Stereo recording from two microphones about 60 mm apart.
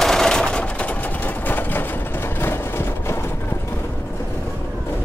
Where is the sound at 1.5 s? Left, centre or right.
Left.